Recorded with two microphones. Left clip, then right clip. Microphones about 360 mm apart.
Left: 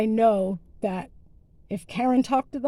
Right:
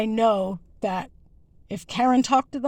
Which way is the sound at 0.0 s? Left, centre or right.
Right.